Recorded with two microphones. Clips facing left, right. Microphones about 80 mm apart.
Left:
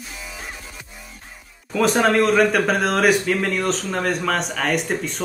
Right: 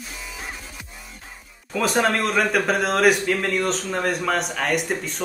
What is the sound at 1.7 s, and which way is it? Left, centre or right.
A man's voice, centre.